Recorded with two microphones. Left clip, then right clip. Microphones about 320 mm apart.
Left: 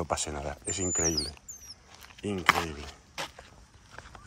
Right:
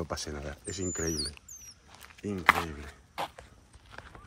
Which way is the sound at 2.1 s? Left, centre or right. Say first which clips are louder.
Even; centre.